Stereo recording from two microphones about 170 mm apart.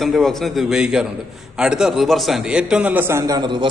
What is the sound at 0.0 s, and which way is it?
A man's voice, centre (ahead or behind).